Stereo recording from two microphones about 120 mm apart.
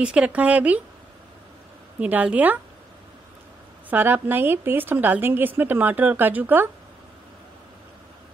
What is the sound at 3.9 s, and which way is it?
A woman's voice, 15° right (ahead or behind).